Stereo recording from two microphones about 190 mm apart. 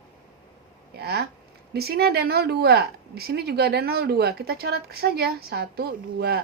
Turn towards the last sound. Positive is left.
turn(degrees=-55)  # may be behind; listen again after turning